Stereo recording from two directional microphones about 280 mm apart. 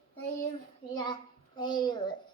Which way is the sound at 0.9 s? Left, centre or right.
Centre.